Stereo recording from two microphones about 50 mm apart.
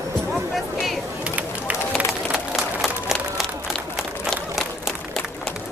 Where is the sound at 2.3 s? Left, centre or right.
Centre.